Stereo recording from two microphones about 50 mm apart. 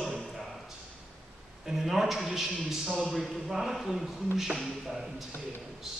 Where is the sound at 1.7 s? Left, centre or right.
Centre.